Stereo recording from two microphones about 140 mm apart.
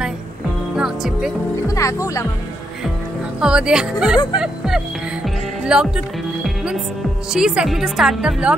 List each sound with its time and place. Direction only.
0.7 s music: 5° right (ahead or behind)
1.7 s speech: 20° left (ahead or behind)
3.3 s a woman's voice: 5° right (ahead or behind)